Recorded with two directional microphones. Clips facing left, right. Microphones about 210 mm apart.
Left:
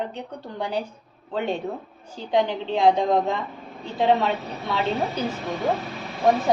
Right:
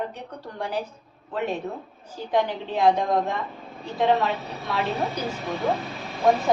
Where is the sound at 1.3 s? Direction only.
30° left (ahead or behind).